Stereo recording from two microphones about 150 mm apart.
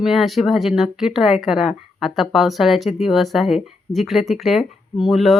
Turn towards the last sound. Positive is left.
turn(degrees=0)  # may be behind; listen again after turning